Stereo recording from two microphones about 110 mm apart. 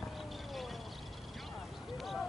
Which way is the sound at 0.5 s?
Centre (ahead or behind).